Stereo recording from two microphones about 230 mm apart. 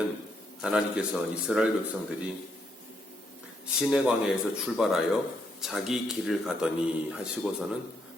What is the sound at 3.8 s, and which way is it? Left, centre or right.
Speech, centre.